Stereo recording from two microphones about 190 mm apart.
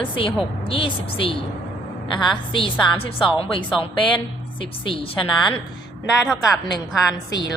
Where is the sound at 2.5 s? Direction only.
25° left (ahead or behind).